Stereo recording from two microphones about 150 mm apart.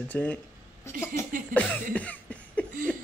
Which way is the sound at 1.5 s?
10° left (ahead or behind).